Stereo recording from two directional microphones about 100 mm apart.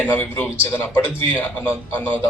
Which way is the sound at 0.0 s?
20° left (ahead or behind).